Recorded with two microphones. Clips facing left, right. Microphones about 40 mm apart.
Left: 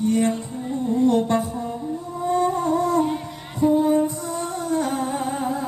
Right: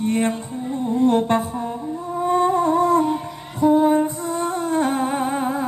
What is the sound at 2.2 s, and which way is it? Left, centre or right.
Humming, right.